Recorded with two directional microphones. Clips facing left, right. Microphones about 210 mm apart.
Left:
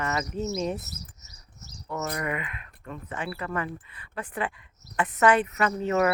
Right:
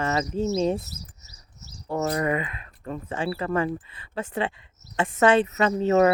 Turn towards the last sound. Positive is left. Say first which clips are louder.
# right 5 dB
turn(degrees=-30)  # may be behind; listen again after turning